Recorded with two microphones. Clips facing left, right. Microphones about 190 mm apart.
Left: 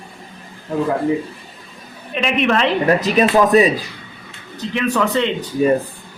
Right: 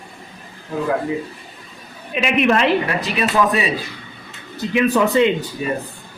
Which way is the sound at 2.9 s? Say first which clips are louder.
Left 7 dB; 40° left (ahead or behind).